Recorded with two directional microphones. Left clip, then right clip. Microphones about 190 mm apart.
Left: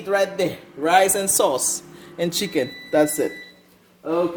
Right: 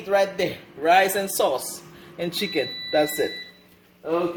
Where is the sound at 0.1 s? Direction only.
50° left (ahead or behind).